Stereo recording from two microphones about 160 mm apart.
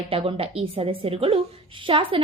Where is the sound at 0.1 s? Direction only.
35° right (ahead or behind).